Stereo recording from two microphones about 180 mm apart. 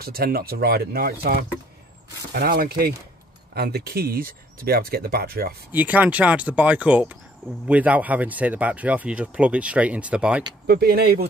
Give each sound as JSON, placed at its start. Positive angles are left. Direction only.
{"t": 0.0, "sound": "speech", "side_deg": -55}
{"t": 5.7, "sound": "speech", "side_deg": -10}
{"t": 10.7, "sound": "speech", "side_deg": -60}